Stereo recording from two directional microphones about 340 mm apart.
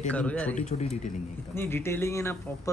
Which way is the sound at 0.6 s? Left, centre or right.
Centre.